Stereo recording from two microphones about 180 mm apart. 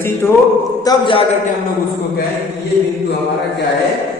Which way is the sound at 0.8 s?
25° left (ahead or behind).